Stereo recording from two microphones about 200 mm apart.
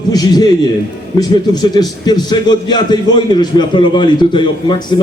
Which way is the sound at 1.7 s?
20° left (ahead or behind).